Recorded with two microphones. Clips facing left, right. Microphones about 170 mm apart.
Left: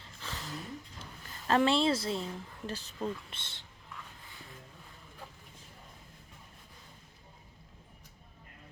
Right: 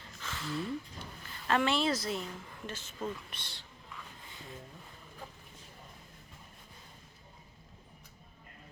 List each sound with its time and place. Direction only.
0.2 s a sound: 35° left (ahead or behind)
1.3 s a woman's voice: 35° left (ahead or behind)
3.0 s speech: 25° left (ahead or behind)